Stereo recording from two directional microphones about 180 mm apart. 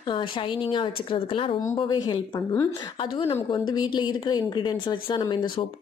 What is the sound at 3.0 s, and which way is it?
Speech, 25° left (ahead or behind).